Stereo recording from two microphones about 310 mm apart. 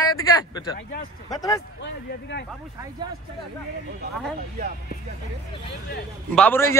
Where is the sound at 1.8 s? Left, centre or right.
Left.